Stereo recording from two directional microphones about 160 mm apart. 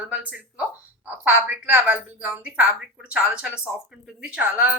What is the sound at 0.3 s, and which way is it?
A woman's voice, 10° right (ahead or behind).